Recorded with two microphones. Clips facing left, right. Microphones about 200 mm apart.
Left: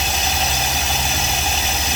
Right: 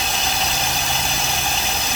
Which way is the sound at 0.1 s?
Centre (ahead or behind).